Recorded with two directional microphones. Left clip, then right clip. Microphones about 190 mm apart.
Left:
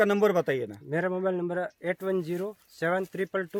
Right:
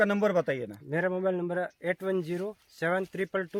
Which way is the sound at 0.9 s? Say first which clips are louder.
Even; centre (ahead or behind).